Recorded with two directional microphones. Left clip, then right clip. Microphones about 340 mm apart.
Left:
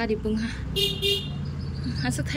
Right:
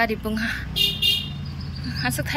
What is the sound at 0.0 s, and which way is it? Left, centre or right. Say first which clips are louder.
Speech: right 4 dB; centre.